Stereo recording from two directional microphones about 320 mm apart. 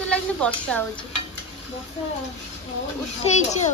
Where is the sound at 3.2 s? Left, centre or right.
Left.